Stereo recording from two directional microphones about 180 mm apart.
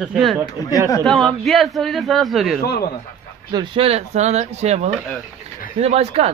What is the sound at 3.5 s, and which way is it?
A man's voice, 25° right (ahead or behind).